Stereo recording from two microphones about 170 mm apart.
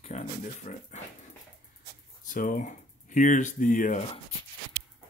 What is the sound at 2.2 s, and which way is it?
Speech, 55° left (ahead or behind).